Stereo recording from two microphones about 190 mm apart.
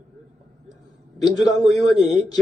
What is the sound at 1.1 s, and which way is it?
Speech, 20° left (ahead or behind).